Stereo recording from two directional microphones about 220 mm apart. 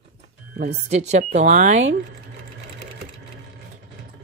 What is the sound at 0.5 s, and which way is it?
Speech, 45° right (ahead or behind).